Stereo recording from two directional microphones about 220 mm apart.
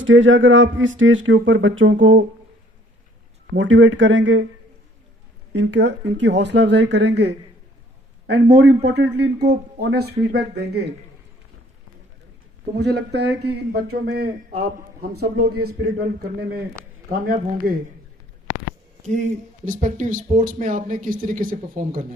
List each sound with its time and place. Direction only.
0.0 s speech: 60° right (ahead or behind)
3.5 s speech: 60° right (ahead or behind)
5.5 s a man's voice: 55° right (ahead or behind)
8.9 s a man's voice: 50° right (ahead or behind)
12.7 s a man's voice: 50° right (ahead or behind)
19.0 s speech: 35° right (ahead or behind)